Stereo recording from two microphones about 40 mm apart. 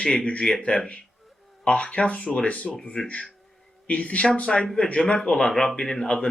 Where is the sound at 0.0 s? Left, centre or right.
Left.